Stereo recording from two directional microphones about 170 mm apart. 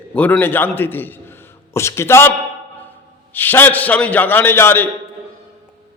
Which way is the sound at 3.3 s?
10° left (ahead or behind).